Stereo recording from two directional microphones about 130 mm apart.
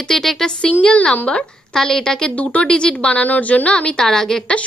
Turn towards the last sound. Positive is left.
turn(degrees=5)  # may be behind; listen again after turning